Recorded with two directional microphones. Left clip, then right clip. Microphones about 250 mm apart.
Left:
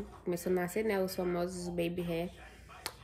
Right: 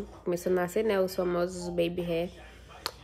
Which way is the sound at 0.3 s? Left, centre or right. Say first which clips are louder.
Right 5 dB; centre.